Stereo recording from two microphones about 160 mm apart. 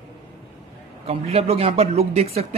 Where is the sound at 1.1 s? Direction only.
40° right (ahead or behind).